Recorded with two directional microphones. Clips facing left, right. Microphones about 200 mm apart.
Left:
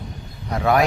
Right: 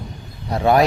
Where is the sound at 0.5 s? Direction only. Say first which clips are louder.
Right 3 dB; 30° right (ahead or behind).